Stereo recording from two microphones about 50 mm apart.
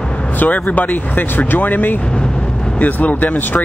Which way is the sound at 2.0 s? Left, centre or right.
Centre.